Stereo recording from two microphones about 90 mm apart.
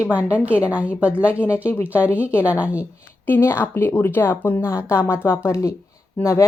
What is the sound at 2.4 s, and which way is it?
Speech, 15° right (ahead or behind).